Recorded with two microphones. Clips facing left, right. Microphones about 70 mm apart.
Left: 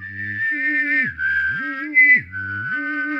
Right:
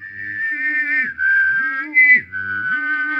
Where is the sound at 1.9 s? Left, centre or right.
Right.